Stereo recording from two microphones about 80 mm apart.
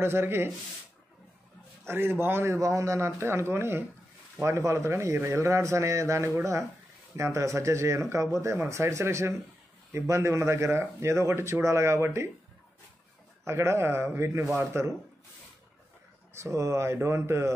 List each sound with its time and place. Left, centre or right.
0.0 s speech: right
1.9 s a man's voice: right
13.5 s a man's voice: right
16.3 s a man's voice: right